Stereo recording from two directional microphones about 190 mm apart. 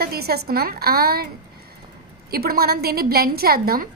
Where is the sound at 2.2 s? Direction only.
50° right (ahead or behind).